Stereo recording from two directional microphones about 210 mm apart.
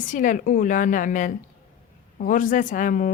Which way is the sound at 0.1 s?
40° left (ahead or behind).